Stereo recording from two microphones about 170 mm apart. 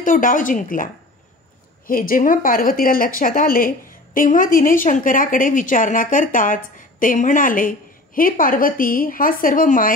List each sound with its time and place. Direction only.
0.0 s speech: 50° left (ahead or behind)
1.9 s speech: 55° left (ahead or behind)